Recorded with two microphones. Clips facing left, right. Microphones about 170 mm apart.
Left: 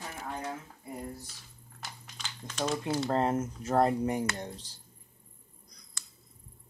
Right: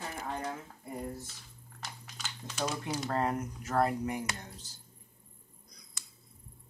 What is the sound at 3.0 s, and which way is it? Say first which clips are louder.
Speech: left 3 dB; 25° left (ahead or behind).